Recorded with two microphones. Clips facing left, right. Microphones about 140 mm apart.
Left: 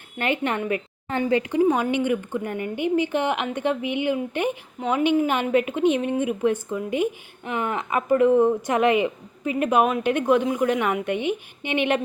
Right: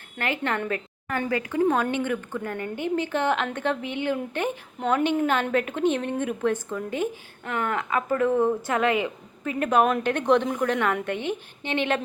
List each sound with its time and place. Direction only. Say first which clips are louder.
0.2 s a woman's voice: left 3 dB; 20° left (ahead or behind)